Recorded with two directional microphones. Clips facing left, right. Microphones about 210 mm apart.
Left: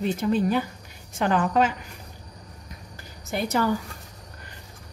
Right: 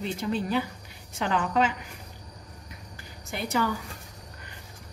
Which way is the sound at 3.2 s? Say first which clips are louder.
Left 6 dB; 45° left (ahead or behind).